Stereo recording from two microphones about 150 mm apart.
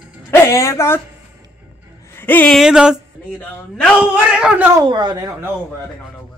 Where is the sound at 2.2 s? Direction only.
10° left (ahead or behind).